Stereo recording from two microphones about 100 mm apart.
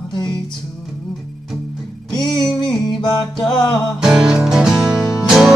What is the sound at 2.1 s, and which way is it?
Music, 50° left (ahead or behind).